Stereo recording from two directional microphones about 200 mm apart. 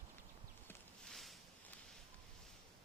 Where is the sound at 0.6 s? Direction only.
5° left (ahead or behind).